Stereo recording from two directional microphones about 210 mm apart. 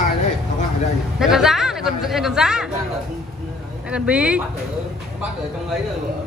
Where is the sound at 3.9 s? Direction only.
5° right (ahead or behind).